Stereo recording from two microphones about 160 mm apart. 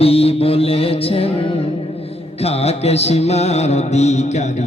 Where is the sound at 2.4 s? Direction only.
40° left (ahead or behind).